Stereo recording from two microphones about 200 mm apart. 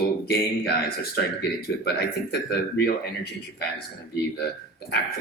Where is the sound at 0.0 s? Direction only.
55° left (ahead or behind).